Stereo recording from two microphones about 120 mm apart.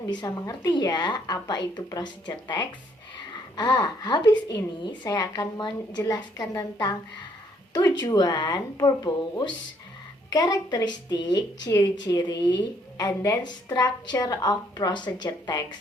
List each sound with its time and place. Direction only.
0.1 s a woman's voice: 35° left (ahead or behind)